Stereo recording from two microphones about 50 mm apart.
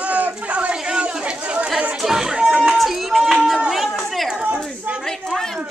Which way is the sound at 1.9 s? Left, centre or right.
Centre.